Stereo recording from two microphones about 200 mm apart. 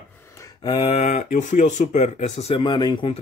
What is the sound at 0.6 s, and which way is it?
Speech, 25° left (ahead or behind).